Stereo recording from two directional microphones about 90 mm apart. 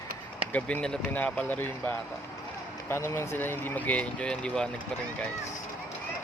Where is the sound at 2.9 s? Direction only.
30° left (ahead or behind); by 4.7 s 10° left (ahead or behind).